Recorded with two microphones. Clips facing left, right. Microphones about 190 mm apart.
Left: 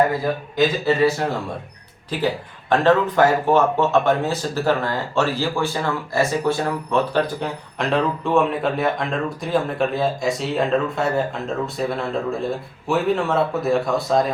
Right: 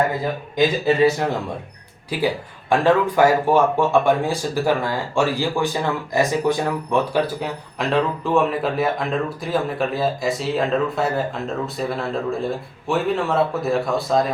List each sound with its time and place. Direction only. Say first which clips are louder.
0.5 s speech: right 2 dB; 15° right (ahead or behind); by 14.3 s centre (ahead or behind)